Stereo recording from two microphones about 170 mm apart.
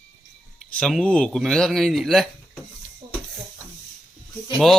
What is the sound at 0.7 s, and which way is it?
Speech, centre (ahead or behind).